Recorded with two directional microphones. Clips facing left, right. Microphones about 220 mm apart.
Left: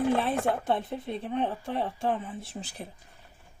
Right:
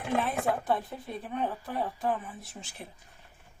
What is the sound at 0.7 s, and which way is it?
Speech, 25° left (ahead or behind).